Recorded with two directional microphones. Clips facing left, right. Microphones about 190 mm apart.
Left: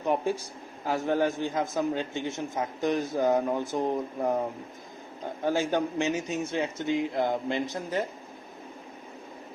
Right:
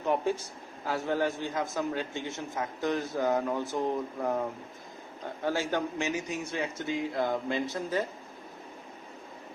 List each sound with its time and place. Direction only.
0.0 s a sound: 15° left (ahead or behind)
0.9 s speech: 15° left (ahead or behind)
5.5 s speech: 20° left (ahead or behind)